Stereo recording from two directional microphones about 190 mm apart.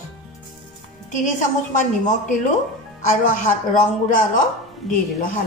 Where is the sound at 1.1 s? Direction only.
40° left (ahead or behind).